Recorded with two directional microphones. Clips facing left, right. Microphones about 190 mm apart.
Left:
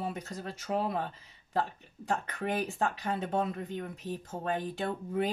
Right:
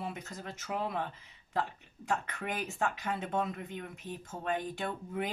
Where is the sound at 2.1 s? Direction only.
35° left (ahead or behind).